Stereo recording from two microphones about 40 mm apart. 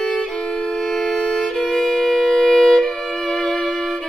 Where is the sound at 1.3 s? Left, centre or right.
Centre.